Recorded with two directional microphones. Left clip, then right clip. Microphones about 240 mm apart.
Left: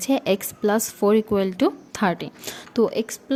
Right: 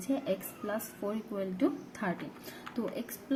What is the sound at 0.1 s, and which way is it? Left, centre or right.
Speech, left.